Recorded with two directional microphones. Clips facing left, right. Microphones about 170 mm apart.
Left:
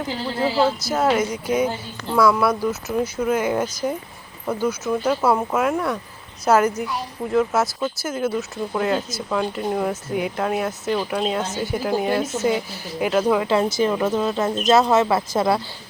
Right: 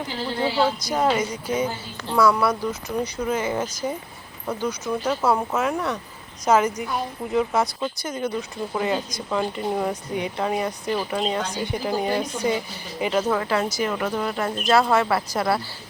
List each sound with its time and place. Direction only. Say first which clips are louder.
0.3 s speech: left 2 dB; 5° left (ahead or behind)
13.5 s speech: left 4 dB; 25° left (ahead or behind)